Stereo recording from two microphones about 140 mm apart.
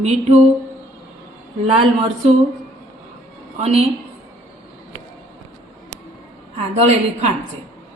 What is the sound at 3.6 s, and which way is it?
Speech, 45° right (ahead or behind).